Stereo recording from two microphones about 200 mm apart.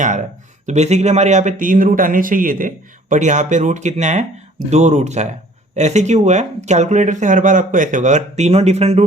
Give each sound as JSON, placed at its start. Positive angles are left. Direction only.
{"t": 0.0, "sound": "speech", "side_deg": -40}